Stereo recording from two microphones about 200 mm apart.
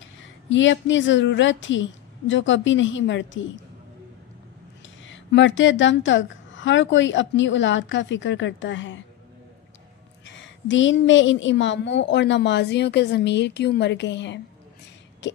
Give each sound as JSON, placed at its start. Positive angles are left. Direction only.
{"t": 0.5, "sound": "a woman's voice", "side_deg": 70}
{"t": 5.0, "sound": "a woman's voice", "side_deg": 65}
{"t": 10.2, "sound": "a woman's voice", "side_deg": 70}
{"t": 15.2, "sound": "a sound", "side_deg": 60}